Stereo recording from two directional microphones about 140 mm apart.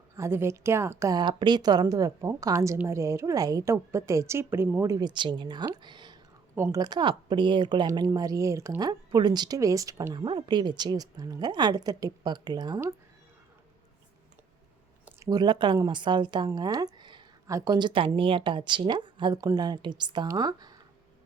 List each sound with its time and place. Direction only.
0.2 s speech: 20° right (ahead or behind)
15.2 s speech: 30° right (ahead or behind)